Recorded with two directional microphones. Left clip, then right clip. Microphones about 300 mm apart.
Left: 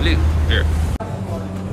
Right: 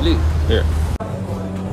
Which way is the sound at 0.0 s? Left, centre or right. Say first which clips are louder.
Right 1 dB; centre.